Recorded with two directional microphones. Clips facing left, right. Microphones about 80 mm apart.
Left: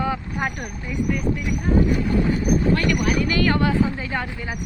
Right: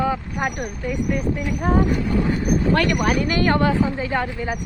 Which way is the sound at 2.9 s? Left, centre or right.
Right.